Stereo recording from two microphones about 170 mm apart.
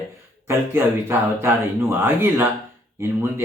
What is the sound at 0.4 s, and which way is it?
Speech, 15° right (ahead or behind).